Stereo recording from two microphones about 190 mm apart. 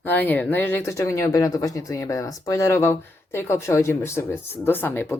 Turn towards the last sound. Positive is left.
turn(degrees=10)  # may be behind; listen again after turning